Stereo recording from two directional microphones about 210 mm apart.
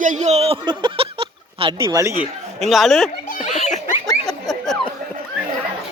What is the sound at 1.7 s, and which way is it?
Speech, 15° right (ahead or behind).